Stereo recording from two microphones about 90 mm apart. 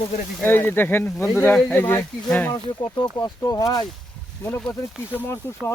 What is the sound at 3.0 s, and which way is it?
Speech, 50° left (ahead or behind).